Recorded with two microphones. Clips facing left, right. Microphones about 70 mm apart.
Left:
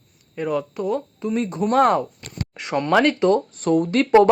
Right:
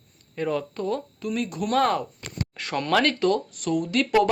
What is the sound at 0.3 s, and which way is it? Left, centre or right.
Speech, centre.